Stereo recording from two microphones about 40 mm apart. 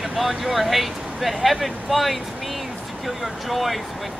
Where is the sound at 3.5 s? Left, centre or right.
Centre.